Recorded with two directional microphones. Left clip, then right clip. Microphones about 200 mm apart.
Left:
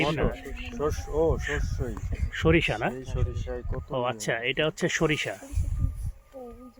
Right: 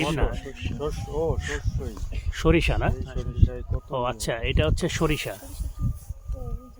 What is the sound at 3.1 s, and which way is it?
Speech, 40° left (ahead or behind).